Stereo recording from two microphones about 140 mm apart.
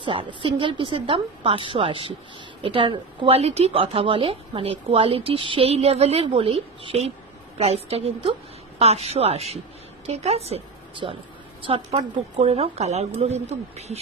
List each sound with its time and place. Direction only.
0.0 s a woman's voice: 35° right (ahead or behind)